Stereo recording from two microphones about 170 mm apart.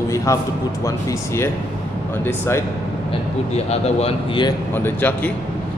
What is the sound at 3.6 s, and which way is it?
Speech, 40° left (ahead or behind).